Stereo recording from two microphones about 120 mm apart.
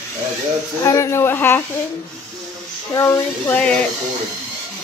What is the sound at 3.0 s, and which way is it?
Speech, 25° left (ahead or behind).